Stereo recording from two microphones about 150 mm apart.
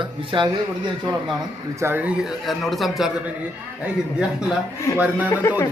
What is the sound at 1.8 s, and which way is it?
A man's voice, 15° right (ahead or behind).